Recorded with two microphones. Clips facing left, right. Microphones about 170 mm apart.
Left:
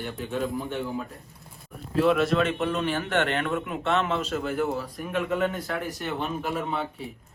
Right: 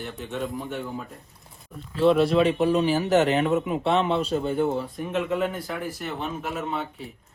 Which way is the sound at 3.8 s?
35° right (ahead or behind).